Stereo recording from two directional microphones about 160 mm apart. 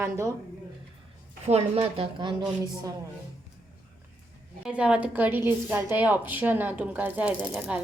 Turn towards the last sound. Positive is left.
turn(degrees=-10)  # may be behind; listen again after turning